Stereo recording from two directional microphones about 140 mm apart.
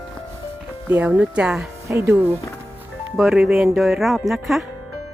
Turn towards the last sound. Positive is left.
turn(degrees=0)  # may be behind; listen again after turning